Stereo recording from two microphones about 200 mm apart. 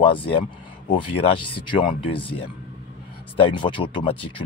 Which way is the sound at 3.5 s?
25° left (ahead or behind).